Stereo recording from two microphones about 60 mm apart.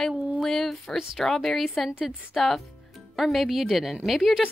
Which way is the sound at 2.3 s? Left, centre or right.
Centre.